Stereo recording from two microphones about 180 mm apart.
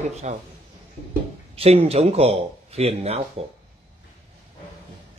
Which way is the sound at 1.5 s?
35° right (ahead or behind).